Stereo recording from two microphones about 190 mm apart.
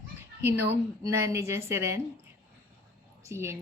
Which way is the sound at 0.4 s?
10° right (ahead or behind).